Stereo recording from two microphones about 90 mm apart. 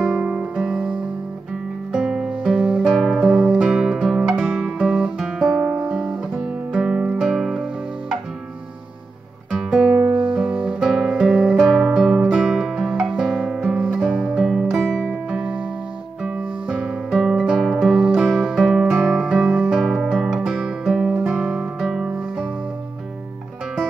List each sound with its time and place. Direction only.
0.2 s music: 15° right (ahead or behind)
3.6 s guitar: 5° right (ahead or behind)
6.7 s music: 15° right (ahead or behind)
9.5 s guitar: 5° right (ahead or behind)
9.9 s guitar: 20° right (ahead or behind); by 11.2 s centre (ahead or behind)
11.2 s music: 15° right (ahead or behind)
11.6 s music: 5° right (ahead or behind)
15.2 s music: 15° right (ahead or behind)
19.8 s guitar: 5° right (ahead or behind)